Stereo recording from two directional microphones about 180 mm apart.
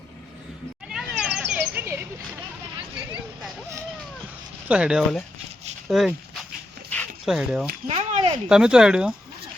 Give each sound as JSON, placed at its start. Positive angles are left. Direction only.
{"t": 0.9, "sound": "a sound", "side_deg": -5}
{"t": 4.7, "sound": "speech", "side_deg": -5}
{"t": 6.9, "sound": "dog", "side_deg": 10}
{"t": 7.3, "sound": "speech", "side_deg": -5}
{"t": 7.9, "sound": "speech", "side_deg": -35}
{"t": 8.4, "sound": "speech", "side_deg": -5}